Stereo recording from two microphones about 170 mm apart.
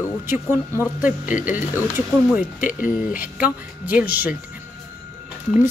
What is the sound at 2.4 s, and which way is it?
Speech, 55° left (ahead or behind).